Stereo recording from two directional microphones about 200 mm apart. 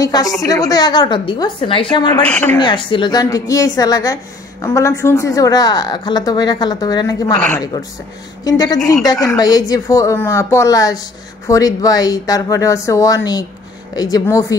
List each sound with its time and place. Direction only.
0.0 s a woman's voice: 20° left (ahead or behind)
2.2 s a woman's voice: 5° left (ahead or behind)
2.6 s a woman's voice: 25° left (ahead or behind)